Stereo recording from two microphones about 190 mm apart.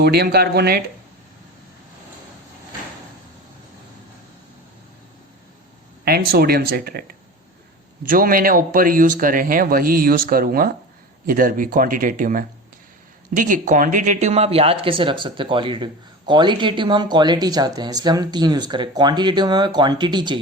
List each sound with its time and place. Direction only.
0.0 s speech: 55° right (ahead or behind)
6.1 s speech: 55° right (ahead or behind)
8.1 s speech: 50° right (ahead or behind); by 20.4 s 25° right (ahead or behind)